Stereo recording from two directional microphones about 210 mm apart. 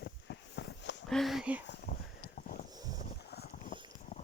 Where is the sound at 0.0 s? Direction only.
55° left (ahead or behind).